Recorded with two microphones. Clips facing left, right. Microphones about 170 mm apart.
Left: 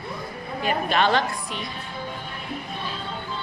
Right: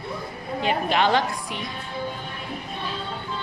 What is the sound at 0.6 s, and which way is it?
Speech, 15° right (ahead or behind).